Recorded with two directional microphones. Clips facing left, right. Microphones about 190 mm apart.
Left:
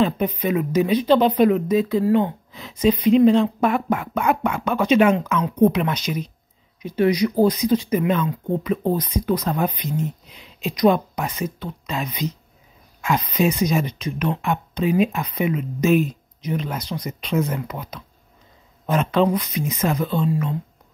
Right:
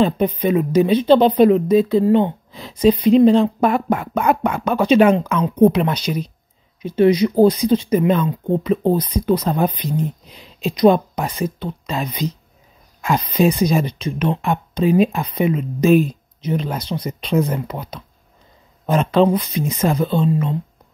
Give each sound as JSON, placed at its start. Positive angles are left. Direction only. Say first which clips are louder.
{"t": 0.0, "sound": "speech", "louder": "right 4 dB", "side_deg": -30}